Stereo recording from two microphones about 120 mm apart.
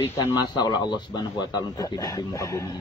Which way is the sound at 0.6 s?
35° left (ahead or behind).